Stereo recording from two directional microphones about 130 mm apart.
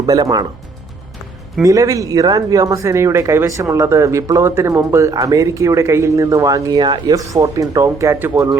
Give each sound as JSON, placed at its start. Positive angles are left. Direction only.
{"t": 0.0, "sound": "speech", "side_deg": -30}
{"t": 1.6, "sound": "speech", "side_deg": -25}